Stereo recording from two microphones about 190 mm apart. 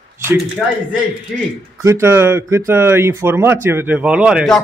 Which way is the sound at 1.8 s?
15° right (ahead or behind).